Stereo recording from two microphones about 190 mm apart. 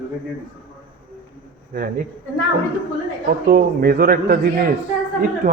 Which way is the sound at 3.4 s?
55° right (ahead or behind).